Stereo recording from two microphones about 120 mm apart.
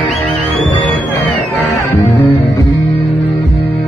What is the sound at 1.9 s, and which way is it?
Music, 20° left (ahead or behind).